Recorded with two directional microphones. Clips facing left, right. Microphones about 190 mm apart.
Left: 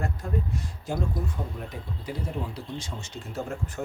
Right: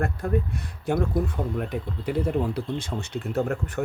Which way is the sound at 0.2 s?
60° right (ahead or behind).